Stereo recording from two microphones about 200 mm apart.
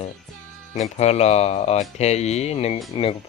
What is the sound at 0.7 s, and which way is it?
Speech, 30° left (ahead or behind).